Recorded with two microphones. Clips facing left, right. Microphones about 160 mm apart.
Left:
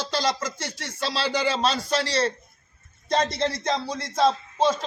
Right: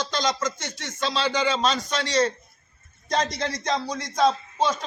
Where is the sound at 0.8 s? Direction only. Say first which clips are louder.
Right 2 dB; 30° left (ahead or behind).